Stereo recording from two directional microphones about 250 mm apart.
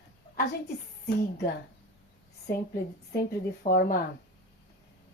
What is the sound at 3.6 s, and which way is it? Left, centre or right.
Speech, left.